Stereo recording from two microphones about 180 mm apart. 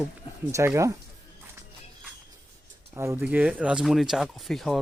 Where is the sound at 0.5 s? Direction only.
15° right (ahead or behind).